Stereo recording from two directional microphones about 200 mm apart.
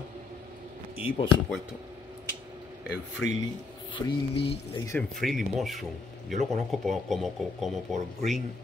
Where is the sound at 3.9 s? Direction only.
25° left (ahead or behind).